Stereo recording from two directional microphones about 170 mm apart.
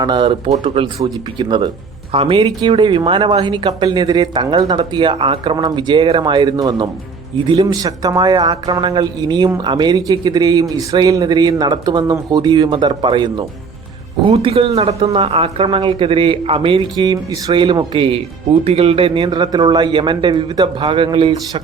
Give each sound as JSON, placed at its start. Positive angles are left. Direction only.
{"t": 0.0, "sound": "a man's voice", "side_deg": -30}